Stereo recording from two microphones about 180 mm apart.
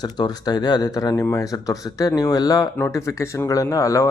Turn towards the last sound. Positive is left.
turn(degrees=15)  # may be behind; listen again after turning